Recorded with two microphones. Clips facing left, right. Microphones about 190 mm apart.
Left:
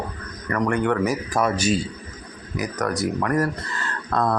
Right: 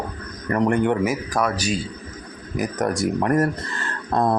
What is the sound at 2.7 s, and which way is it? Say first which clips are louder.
A man's voice: right 2 dB; 30° right (ahead or behind).